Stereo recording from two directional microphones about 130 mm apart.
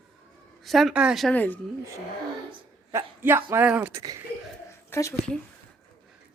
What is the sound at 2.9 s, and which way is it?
Speech, 20° right (ahead or behind).